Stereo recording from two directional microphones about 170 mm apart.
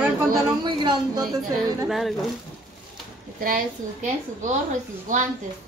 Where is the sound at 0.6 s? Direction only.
30° right (ahead or behind).